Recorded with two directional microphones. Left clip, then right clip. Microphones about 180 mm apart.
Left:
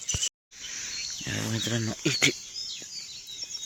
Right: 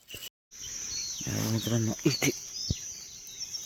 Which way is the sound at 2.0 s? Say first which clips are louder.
Left 5 dB; 15° right (ahead or behind).